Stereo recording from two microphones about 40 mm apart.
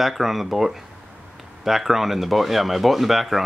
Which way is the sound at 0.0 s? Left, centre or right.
Centre.